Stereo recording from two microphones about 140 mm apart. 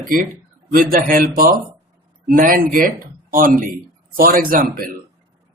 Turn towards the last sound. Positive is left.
turn(degrees=-90)